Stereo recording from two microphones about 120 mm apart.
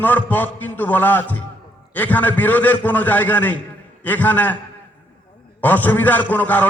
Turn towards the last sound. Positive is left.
turn(degrees=15)  # may be behind; listen again after turning